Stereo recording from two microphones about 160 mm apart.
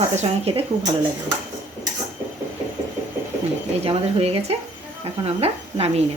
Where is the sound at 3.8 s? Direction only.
40° right (ahead or behind).